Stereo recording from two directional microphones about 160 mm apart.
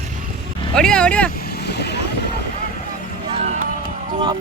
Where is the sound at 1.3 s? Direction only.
75° left (ahead or behind); by 2.0 s 90° left.